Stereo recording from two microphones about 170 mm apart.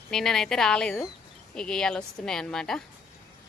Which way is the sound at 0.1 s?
Centre (ahead or behind).